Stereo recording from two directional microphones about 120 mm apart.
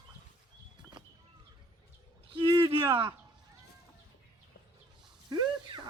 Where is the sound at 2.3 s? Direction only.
40° right (ahead or behind).